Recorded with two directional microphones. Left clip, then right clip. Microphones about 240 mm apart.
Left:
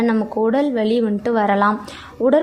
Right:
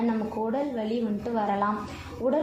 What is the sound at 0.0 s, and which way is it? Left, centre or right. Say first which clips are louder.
A woman's voice: left 10 dB; left.